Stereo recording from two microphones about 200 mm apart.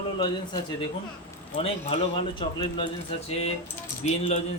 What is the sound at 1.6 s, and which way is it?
A man's voice, 30° left (ahead or behind).